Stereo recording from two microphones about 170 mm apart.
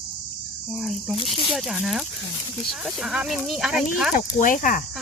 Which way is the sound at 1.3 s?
Centre (ahead or behind).